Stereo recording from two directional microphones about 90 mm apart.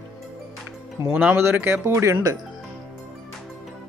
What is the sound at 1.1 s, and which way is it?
Speech, 15° right (ahead or behind).